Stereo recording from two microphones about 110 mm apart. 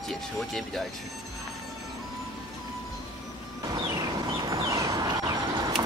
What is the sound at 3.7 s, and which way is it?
Vehicle, 35° right (ahead or behind).